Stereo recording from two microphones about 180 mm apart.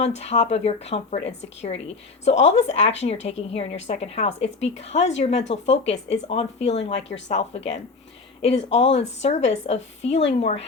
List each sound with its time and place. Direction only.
0.2 s speech: 35° left (ahead or behind)
2.4 s speech: 35° left (ahead or behind)